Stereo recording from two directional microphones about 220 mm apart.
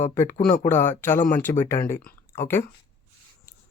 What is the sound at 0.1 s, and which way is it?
Speech, 10° left (ahead or behind).